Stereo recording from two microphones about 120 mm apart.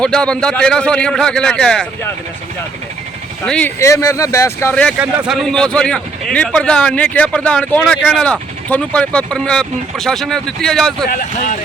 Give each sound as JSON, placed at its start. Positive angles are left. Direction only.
{"t": 0.0, "sound": "speech", "side_deg": 5}
{"t": 3.4, "sound": "speech", "side_deg": 5}
{"t": 3.8, "sound": "speech", "side_deg": 25}
{"t": 4.7, "sound": "speech", "side_deg": 10}